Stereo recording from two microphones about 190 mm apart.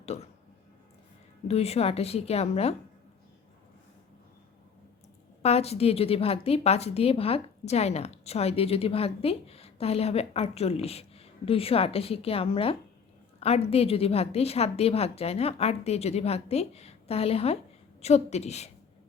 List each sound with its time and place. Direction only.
0.0 s speech: 35° left (ahead or behind)
1.5 s a woman's voice: 35° left (ahead or behind)
5.4 s a woman's voice: 35° left (ahead or behind)